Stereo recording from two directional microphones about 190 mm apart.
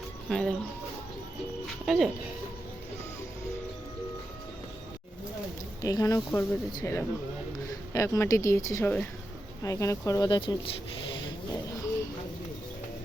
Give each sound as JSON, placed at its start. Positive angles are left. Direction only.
{"t": 0.3, "sound": "speech", "side_deg": 5}
{"t": 1.8, "sound": "speech", "side_deg": 0}
{"t": 5.8, "sound": "speech", "side_deg": 20}